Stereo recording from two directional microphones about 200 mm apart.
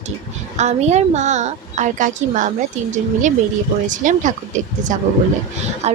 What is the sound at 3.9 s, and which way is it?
A woman's voice, 40° right (ahead or behind).